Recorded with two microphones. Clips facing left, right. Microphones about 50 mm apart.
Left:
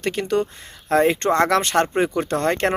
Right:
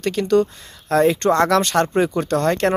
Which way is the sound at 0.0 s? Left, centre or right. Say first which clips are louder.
Right 4 dB; left.